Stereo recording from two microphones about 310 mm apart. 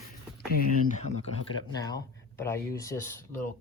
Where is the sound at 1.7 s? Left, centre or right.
Centre.